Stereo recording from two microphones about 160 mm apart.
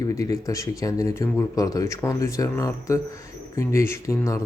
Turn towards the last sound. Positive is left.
turn(degrees=20)  # may be behind; listen again after turning